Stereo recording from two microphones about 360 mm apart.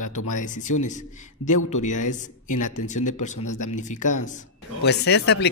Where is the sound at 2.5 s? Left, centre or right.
Left.